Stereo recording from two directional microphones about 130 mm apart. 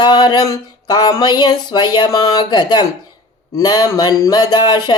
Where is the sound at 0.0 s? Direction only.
35° left (ahead or behind).